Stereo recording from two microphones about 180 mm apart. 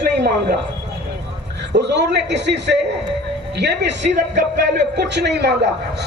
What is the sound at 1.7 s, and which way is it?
A man's voice, 70° right (ahead or behind).